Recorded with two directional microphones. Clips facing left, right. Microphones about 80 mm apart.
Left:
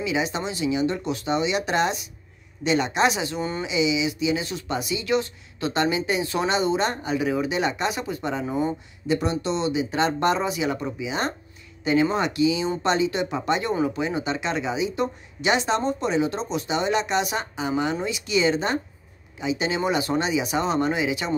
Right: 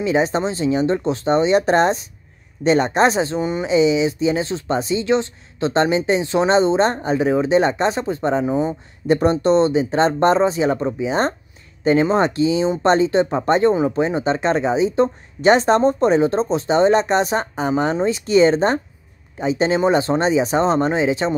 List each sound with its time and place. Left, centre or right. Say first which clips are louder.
0.0 s speech: right 7 dB; right
3.3 s speech: right 6 dB; centre
3.6 s speech: right 8 dB; right
8.5 s speech: right 5 dB; right
9.0 s speech: right 8 dB; right